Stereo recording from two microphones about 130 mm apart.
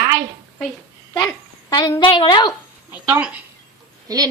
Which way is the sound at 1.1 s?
30° left (ahead or behind).